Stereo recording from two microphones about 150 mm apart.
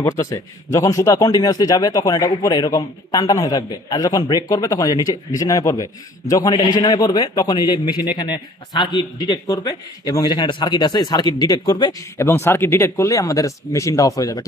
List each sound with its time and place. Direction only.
0.0 s a man's voice: 20° left (ahead or behind)